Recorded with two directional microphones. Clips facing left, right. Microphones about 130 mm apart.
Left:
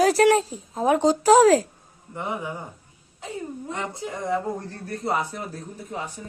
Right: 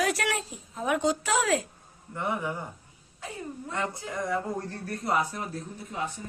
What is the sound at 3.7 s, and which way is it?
Speech, 20° left (ahead or behind).